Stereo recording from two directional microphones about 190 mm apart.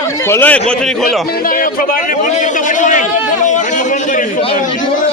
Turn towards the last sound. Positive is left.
turn(degrees=40)  # may be behind; listen again after turning